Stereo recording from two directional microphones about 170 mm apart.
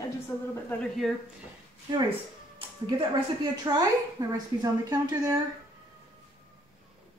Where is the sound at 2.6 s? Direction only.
25° right (ahead or behind).